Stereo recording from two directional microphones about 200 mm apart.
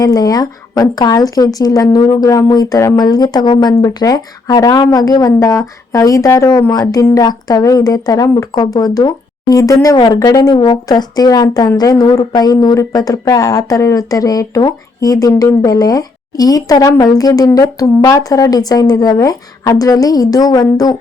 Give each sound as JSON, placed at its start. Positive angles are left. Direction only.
{"t": 0.0, "sound": "speech", "side_deg": 20}